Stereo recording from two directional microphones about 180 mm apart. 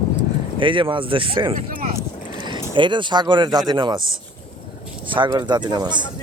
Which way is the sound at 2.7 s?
25° right (ahead or behind).